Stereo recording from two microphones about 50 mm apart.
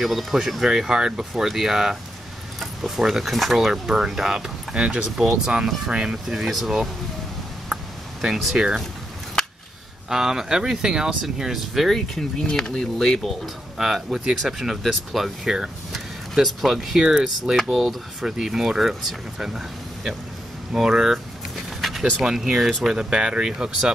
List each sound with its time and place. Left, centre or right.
0.0 s speech: centre
4.7 s speech: right
6.2 s speech: centre
7.7 s a sound: centre
10.0 s speech: centre
12.4 s speech: centre
13.7 s speech: centre
15.4 s speech: centre
22.2 s speech: centre